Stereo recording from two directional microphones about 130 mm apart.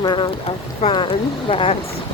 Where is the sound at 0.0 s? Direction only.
35° left (ahead or behind).